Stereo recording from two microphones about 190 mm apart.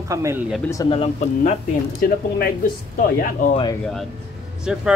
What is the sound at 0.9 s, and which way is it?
Speech, 35° left (ahead or behind).